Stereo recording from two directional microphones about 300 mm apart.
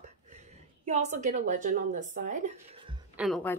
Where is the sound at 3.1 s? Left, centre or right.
Centre.